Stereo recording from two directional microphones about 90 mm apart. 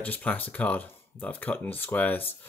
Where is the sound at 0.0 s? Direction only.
15° left (ahead or behind).